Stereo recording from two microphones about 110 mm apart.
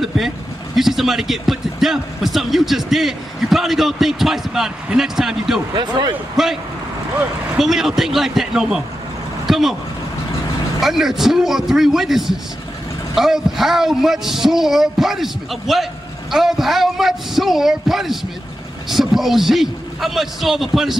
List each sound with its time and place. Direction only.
0.7 s speech: 5° right (ahead or behind)
5.8 s speech: 40° right (ahead or behind)
6.3 s speech: 5° right (ahead or behind)
10.8 s speech: centre (ahead or behind)